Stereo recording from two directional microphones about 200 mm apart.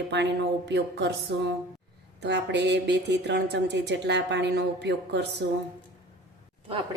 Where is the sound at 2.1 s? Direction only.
60° right (ahead or behind).